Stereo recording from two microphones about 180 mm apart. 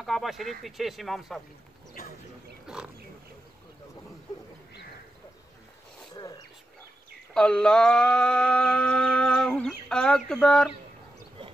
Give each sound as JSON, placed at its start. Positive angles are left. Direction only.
{"t": 0.0, "sound": "mantra", "side_deg": 0}
{"t": 2.7, "sound": "speech", "side_deg": -5}
{"t": 6.1, "sound": "a sound", "side_deg": 20}
{"t": 7.3, "sound": "mantra", "side_deg": 5}